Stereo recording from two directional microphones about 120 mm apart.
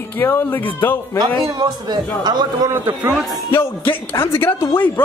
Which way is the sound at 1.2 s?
35° right (ahead or behind).